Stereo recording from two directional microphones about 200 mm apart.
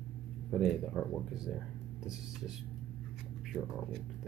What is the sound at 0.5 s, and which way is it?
Speech, centre (ahead or behind).